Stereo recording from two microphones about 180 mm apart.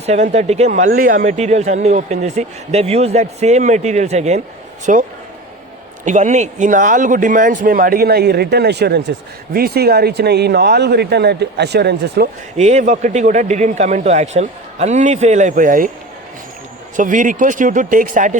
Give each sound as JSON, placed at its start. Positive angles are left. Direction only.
{"t": 0.0, "sound": "speech", "side_deg": -40}
{"t": 6.1, "sound": "speech", "side_deg": -40}
{"t": 12.5, "sound": "speech", "side_deg": -40}
{"t": 17.0, "sound": "speech", "side_deg": -45}